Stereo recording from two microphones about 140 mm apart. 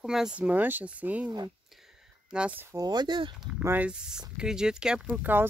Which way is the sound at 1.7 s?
5° right (ahead or behind).